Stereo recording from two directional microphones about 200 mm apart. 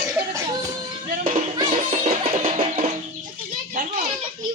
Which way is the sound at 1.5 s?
30° right (ahead or behind).